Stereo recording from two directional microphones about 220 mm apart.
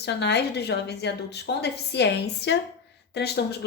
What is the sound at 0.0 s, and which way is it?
A woman's voice, 50° left (ahead or behind).